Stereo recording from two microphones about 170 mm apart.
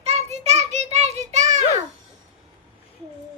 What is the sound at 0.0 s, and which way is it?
Child singing, 40° right (ahead or behind).